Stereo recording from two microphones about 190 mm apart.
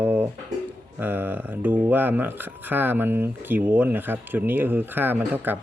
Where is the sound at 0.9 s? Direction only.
10° right (ahead or behind).